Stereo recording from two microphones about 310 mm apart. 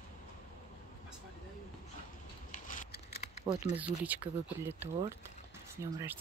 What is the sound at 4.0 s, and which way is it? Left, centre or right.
Speech, centre.